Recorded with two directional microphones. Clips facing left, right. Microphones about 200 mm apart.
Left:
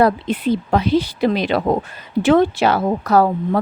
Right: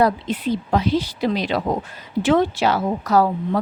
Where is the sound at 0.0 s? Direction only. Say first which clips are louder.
Left 3 dB; 60° left (ahead or behind).